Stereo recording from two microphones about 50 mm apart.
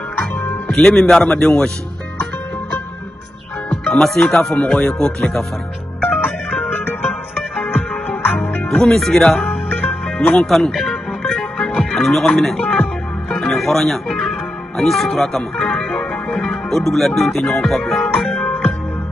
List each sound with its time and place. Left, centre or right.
0.7 s speech: centre
3.8 s speech: centre
5.9 s music: left
8.8 s speech: centre
11.2 s music: centre
12.5 s music: left
13.3 s speech: centre
15.6 s music: centre